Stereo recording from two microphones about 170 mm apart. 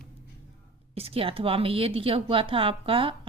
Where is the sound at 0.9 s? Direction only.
35° right (ahead or behind).